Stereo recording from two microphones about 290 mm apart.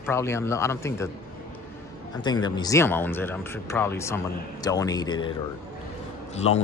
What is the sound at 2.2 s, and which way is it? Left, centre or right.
Speech, centre.